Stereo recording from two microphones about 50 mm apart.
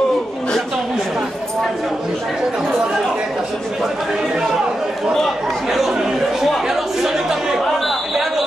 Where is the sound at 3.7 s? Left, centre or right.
Centre.